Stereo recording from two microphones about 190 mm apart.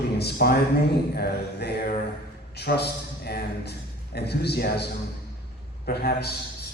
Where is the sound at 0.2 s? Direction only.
55° left (ahead or behind).